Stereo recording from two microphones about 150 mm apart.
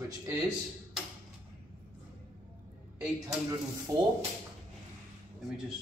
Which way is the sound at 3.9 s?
25° right (ahead or behind).